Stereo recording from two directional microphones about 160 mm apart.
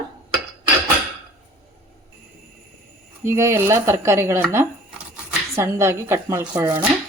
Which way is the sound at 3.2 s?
15° right (ahead or behind).